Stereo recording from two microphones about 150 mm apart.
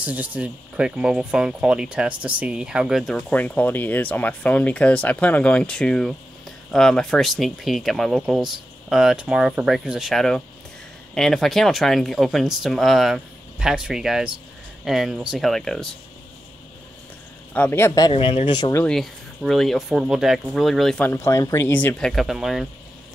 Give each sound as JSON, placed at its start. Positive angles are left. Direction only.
{"t": 0.0, "sound": "speech", "side_deg": -10}
{"t": 17.6, "sound": "speech", "side_deg": 15}
{"t": 18.1, "sound": "speech", "side_deg": 40}
{"t": 18.6, "sound": "speech", "side_deg": 20}
{"t": 18.9, "sound": "speech", "side_deg": 0}
{"t": 22.1, "sound": "speech", "side_deg": 0}